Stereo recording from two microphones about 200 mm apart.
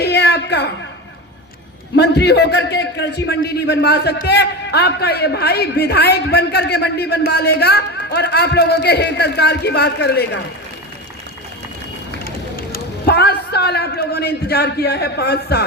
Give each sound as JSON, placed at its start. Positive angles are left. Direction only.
{"t": 0.0, "sound": "a sound", "side_deg": 55}
{"t": 2.0, "sound": "a man's voice", "side_deg": 55}
{"t": 12.2, "sound": "a man's voice", "side_deg": 50}